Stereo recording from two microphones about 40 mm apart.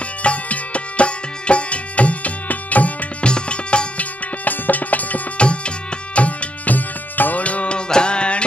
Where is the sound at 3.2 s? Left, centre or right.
Left.